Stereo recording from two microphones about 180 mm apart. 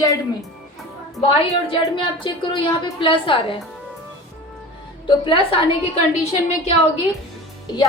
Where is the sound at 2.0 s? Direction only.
25° left (ahead or behind).